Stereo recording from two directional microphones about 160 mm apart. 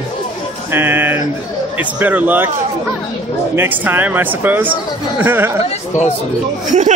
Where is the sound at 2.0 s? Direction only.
10° right (ahead or behind).